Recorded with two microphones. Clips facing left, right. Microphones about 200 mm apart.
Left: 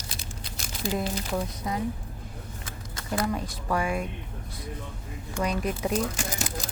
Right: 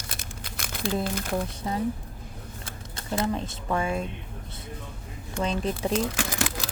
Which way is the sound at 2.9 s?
25° right (ahead or behind).